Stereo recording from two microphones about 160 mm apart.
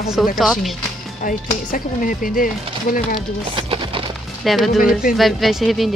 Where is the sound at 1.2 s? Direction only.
55° left (ahead or behind).